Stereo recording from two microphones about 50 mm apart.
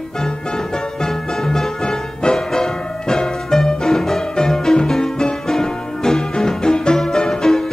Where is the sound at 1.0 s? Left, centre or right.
Centre.